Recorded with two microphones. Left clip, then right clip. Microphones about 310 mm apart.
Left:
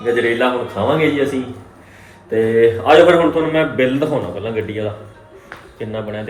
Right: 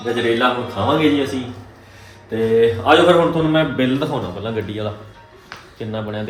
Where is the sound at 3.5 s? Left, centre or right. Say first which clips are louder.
Left 2 dB; centre.